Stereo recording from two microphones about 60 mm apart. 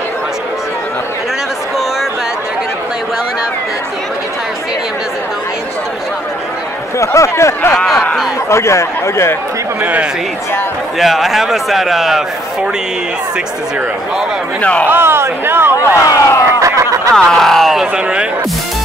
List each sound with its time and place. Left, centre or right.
7.0 s speech: left
7.8 s a sound: centre
8.5 s speech: left
11.0 s a man's voice: centre
14.6 s speech: left
14.9 s speech: right
16.1 s speech: left
16.5 s snicker: right
17.1 s speech: centre